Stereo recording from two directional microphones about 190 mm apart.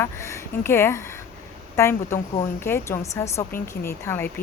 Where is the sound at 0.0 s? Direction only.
15° left (ahead or behind).